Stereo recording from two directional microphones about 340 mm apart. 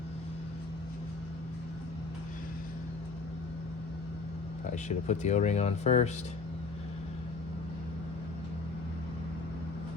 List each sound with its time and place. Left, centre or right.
4.7 s speech: left